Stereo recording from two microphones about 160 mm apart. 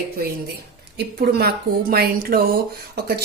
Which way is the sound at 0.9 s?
80° right.